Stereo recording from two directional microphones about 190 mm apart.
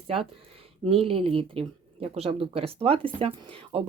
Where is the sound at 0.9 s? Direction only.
30° right (ahead or behind).